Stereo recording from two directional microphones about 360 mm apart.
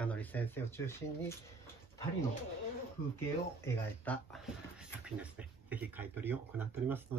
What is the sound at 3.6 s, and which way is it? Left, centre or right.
Speech, centre.